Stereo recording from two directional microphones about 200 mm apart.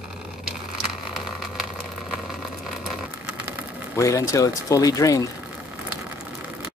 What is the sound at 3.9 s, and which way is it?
Speech, 15° left (ahead or behind).